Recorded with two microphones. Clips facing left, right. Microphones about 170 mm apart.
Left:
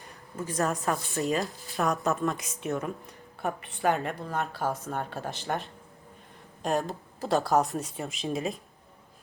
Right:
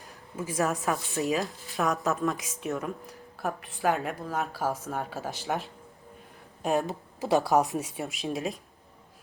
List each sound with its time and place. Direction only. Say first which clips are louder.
0.0 s speech: even; 5° right (ahead or behind)